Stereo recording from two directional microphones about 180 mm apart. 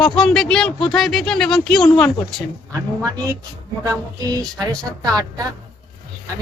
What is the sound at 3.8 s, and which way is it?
Speech, 20° right (ahead or behind).